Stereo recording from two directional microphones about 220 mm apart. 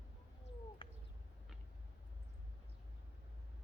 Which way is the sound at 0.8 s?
25° left (ahead or behind).